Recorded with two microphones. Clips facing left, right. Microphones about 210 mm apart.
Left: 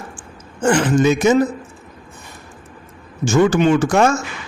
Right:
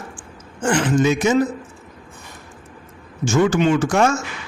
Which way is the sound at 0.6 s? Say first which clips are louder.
Left 4 dB; 60° left (ahead or behind).